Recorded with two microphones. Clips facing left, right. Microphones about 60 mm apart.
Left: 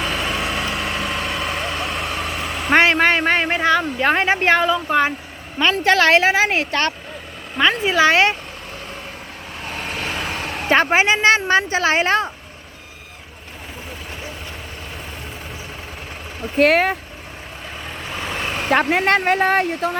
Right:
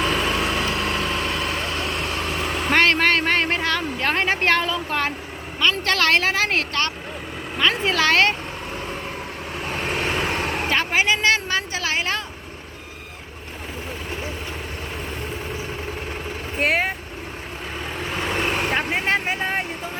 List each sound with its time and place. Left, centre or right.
0.0 s vehicle: centre
2.7 s a woman's voice: centre
6.7 s speech: left
7.6 s a woman's voice: centre
9.6 s vehicle: centre
10.7 s speech: left
16.6 s speech: left
18.0 s vehicle: centre
18.7 s speech: left